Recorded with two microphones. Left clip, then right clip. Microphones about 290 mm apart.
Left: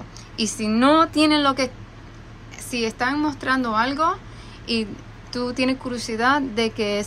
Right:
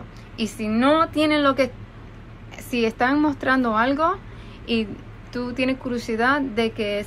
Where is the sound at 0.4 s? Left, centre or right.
Centre.